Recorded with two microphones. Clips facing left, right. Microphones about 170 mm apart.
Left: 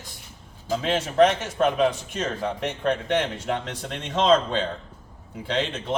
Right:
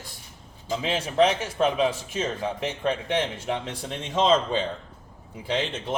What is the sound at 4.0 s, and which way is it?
Speech, 5° right (ahead or behind).